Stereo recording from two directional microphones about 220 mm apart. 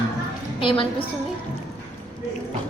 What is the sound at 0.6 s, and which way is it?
Speech, 25° left (ahead or behind).